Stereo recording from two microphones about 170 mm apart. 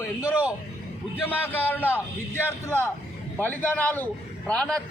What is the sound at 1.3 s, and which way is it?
A man's voice, 10° left (ahead or behind).